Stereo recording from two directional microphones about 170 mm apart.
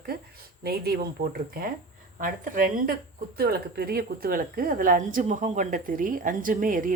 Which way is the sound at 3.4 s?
65° right (ahead or behind).